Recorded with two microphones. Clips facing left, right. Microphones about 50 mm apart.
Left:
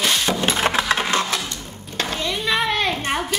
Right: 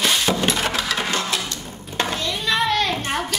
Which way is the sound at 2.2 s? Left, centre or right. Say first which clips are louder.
Left 2 dB; centre.